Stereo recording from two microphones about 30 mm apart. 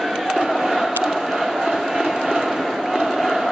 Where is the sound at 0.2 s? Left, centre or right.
Centre.